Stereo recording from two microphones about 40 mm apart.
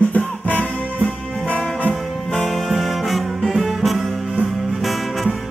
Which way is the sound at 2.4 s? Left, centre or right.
Centre.